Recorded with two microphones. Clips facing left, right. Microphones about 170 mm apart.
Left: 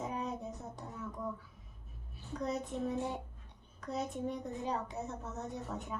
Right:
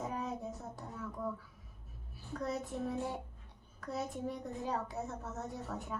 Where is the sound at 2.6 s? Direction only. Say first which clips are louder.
Left 1 dB; centre (ahead or behind).